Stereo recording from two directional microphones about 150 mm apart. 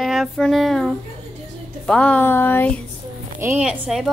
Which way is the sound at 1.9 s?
10° left (ahead or behind).